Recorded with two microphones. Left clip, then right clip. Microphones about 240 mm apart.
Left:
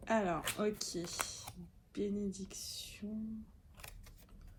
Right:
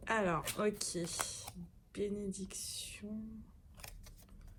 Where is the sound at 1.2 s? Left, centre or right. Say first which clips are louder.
Right 1 dB; right.